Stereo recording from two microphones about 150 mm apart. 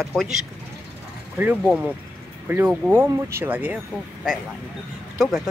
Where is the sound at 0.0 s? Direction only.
Centre (ahead or behind).